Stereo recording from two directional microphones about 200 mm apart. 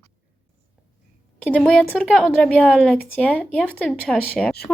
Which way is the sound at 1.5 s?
5° left (ahead or behind).